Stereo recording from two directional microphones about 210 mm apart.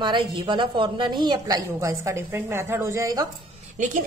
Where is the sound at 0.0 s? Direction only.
20° right (ahead or behind).